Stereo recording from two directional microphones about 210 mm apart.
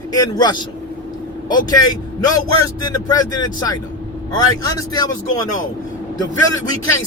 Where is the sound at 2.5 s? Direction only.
20° left (ahead or behind).